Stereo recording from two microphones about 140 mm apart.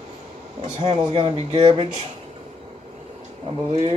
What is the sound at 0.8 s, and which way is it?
Speech, 35° right (ahead or behind).